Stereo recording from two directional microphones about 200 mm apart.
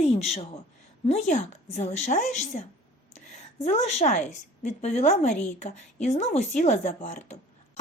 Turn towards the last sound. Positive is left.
turn(degrees=35)  # may be behind; listen again after turning